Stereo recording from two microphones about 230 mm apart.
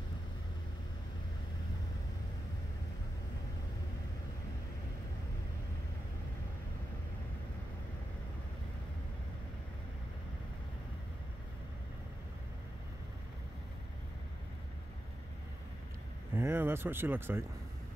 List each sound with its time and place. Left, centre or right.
16.3 s speech: centre